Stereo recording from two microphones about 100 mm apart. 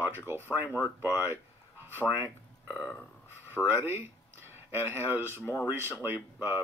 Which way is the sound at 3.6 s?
20° right (ahead or behind).